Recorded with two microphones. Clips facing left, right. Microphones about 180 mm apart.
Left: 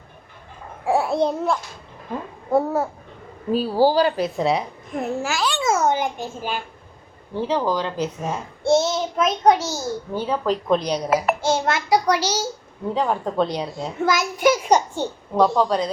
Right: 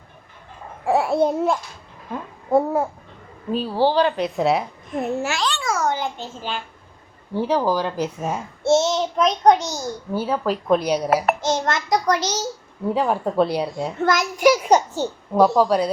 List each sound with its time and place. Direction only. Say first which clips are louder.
0.9 s babbling: right 1 dB; centre (ahead or behind)
2.5 s a child's voice: right 1 dB; 5° left (ahead or behind)
5.5 s a sound: left 3 dB; 20° left (ahead or behind)
7.3 s a child's voice: right 2 dB; 10° right (ahead or behind); by 9.8 s 5° left (ahead or behind)
10.2 s speech: right 1 dB; 5° right (ahead or behind)
11.3 s a child's voice: left 1 dB; 10° left (ahead or behind)
12.9 s speech: right 2 dB; 5° right (ahead or behind)
14.0 s a child's voice: right 1 dB; 5° left (ahead or behind)